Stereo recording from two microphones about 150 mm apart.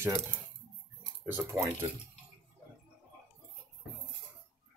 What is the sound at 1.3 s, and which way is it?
Speech, 15° right (ahead or behind).